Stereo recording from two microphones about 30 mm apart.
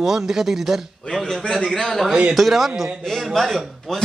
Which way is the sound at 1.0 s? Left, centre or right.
Left.